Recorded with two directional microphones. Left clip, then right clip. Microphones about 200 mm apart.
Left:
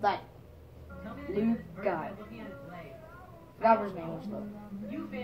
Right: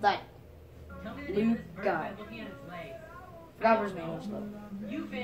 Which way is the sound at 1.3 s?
35° right (ahead or behind).